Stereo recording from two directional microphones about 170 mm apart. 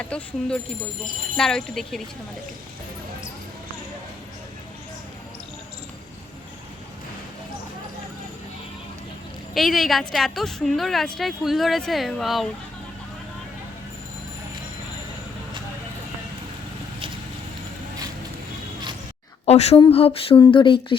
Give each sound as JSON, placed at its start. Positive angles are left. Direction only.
{"t": 0.0, "sound": "a woman's voice", "side_deg": 5}
{"t": 9.6, "sound": "a woman's voice", "side_deg": 0}
{"t": 19.5, "sound": "speech", "side_deg": 35}